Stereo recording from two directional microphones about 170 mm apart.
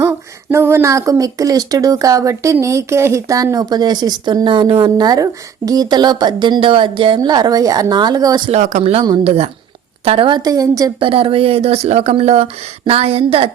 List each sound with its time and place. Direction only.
0.5 s speech: 15° right (ahead or behind)
8.4 s speech: 45° right (ahead or behind)
8.8 s speech: 35° right (ahead or behind)
11.0 s speech: 30° right (ahead or behind)